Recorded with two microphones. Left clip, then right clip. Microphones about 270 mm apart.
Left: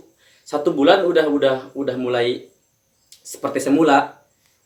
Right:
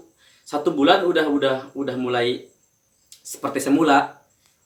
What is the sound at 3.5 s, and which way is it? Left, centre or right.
Speech, centre.